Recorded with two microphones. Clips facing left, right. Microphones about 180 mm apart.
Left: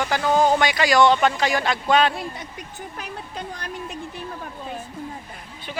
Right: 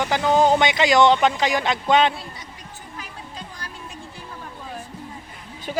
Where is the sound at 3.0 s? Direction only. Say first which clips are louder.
Left 4 dB; 60° left (ahead or behind).